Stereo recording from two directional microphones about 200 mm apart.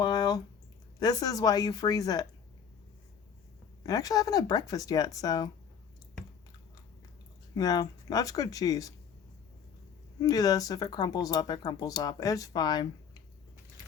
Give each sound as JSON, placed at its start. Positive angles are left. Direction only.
{"t": 0.0, "sound": "a sound", "side_deg": 20}
{"t": 0.9, "sound": "speech", "side_deg": 20}
{"t": 3.8, "sound": "speech", "side_deg": 20}
{"t": 7.5, "sound": "speech", "side_deg": 20}
{"t": 10.2, "sound": "speech", "side_deg": 20}